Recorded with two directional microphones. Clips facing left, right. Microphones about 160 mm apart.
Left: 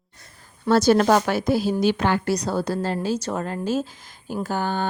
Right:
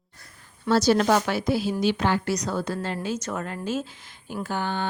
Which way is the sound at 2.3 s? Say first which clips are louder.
Left 4 dB; 35° left (ahead or behind).